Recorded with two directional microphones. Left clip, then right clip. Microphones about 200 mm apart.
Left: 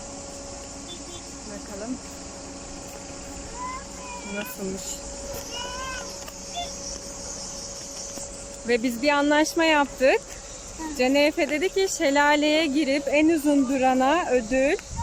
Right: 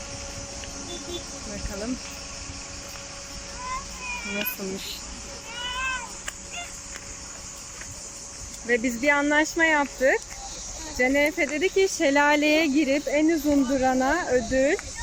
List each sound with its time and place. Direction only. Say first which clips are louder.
8.6 s speech: even; 5° left (ahead or behind)